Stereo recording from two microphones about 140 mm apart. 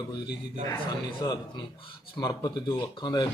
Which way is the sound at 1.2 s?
30° left (ahead or behind).